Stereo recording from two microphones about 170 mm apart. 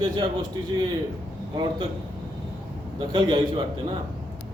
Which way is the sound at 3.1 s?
25° right (ahead or behind).